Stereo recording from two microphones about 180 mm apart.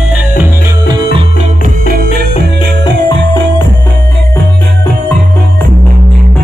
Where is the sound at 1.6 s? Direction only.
55° right (ahead or behind).